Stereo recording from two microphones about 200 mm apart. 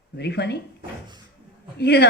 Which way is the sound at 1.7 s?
55° left (ahead or behind).